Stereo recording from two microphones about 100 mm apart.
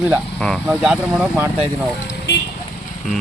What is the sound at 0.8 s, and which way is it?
Speech, 5° right (ahead or behind).